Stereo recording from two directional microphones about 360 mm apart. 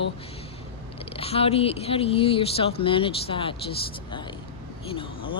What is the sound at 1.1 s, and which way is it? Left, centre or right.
Speech, centre.